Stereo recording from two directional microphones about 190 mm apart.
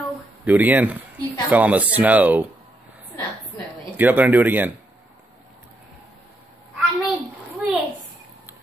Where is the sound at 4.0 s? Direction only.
10° right (ahead or behind).